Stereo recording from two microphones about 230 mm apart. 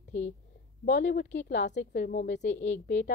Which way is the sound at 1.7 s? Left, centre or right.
Left.